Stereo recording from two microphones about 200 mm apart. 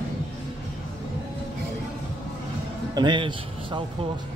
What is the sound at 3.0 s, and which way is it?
Speech, 25° right (ahead or behind).